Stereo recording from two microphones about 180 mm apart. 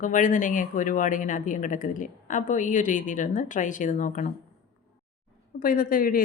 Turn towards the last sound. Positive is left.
turn(degrees=50)  # may be behind; listen again after turning